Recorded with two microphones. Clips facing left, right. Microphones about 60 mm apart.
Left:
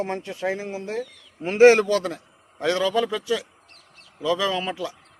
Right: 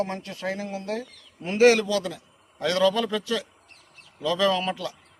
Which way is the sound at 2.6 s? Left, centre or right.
Left.